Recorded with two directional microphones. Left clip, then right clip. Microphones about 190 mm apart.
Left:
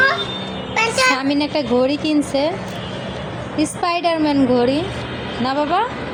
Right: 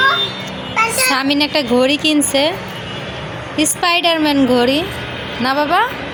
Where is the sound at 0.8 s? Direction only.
50° left (ahead or behind).